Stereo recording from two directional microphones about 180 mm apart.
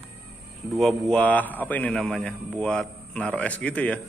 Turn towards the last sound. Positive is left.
turn(degrees=5)  # may be behind; listen again after turning